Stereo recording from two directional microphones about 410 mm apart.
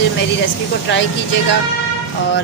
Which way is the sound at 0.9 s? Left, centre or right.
Left.